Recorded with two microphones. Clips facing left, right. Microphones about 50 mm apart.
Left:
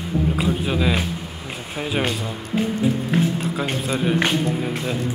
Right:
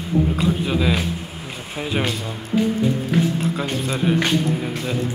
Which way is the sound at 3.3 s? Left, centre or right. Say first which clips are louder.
Right 1 dB; centre.